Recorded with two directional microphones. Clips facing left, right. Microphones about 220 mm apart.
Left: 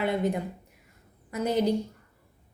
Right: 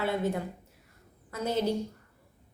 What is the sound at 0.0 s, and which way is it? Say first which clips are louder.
A woman's voice: left 3 dB; 15° left (ahead or behind).